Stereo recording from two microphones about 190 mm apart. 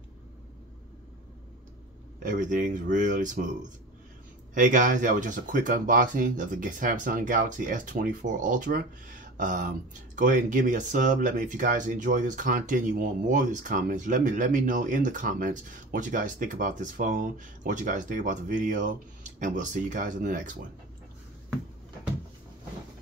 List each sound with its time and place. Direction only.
2.2 s speech: 45° right (ahead or behind)
4.6 s speech: 45° right (ahead or behind)